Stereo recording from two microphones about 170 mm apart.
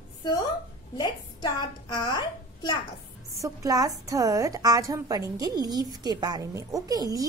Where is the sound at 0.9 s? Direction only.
25° left (ahead or behind).